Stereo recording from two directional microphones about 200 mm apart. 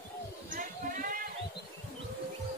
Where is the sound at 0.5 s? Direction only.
45° right (ahead or behind).